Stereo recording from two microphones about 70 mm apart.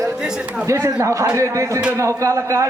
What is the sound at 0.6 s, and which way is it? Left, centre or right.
Speech, right.